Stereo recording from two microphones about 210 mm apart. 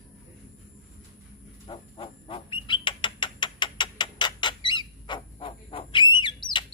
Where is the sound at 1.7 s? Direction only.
25° left (ahead or behind).